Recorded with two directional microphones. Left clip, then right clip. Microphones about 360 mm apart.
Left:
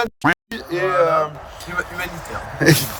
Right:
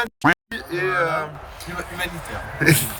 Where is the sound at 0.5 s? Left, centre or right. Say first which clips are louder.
Left 3 dB; left.